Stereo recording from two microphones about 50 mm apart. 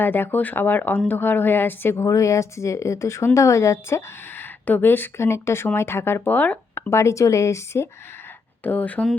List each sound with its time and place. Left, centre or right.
0.0 s a woman's voice: left
2.0 s speech: left
3.3 s speech: left
4.4 s a sound: left
5.1 s a woman's voice: left
6.3 s speech: left
6.9 s speech: left
8.6 s speech: left